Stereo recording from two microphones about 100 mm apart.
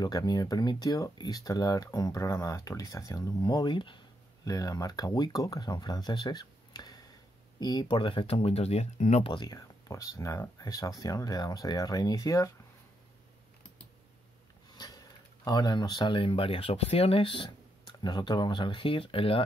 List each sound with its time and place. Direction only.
0.0 s speech: 40° left (ahead or behind)
4.5 s speech: 35° left (ahead or behind)
7.9 s speech: 60° left (ahead or behind); by 9.3 s 90° left
9.3 s speech: 45° left (ahead or behind)
15.4 s speech: 45° left (ahead or behind); by 19.4 s 65° left (ahead or behind)